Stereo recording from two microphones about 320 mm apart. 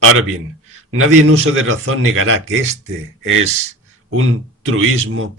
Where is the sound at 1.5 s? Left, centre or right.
Right.